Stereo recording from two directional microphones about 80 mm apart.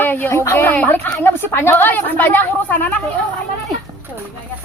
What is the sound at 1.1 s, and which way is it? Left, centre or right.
A woman's voice, left.